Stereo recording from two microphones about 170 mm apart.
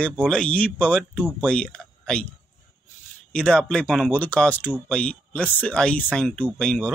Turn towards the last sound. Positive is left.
turn(degrees=5)  # may be behind; listen again after turning